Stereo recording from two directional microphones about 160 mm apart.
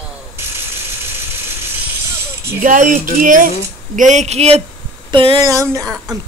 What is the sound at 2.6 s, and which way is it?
Speech, 55° right (ahead or behind).